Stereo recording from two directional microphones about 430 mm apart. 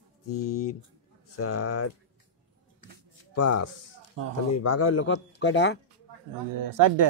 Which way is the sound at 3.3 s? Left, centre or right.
Left.